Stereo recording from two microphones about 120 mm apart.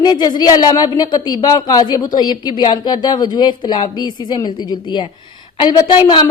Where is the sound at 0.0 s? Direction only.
35° left (ahead or behind).